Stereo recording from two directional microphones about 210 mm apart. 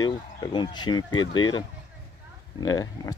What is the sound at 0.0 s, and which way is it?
Speech, 20° left (ahead or behind).